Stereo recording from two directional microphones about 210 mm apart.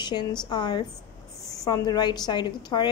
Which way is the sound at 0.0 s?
20° left (ahead or behind).